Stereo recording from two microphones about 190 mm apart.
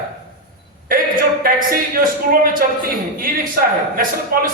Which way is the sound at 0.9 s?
45° right (ahead or behind).